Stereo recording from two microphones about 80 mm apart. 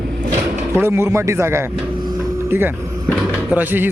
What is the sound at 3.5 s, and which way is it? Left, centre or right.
Speech, right.